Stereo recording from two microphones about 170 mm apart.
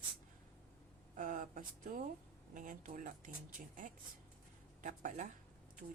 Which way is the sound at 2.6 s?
50° right (ahead or behind).